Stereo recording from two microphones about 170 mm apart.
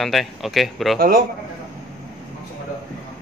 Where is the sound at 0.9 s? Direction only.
60° right (ahead or behind).